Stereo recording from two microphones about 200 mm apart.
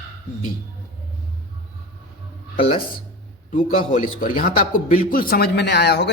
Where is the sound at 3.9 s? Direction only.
45° left (ahead or behind).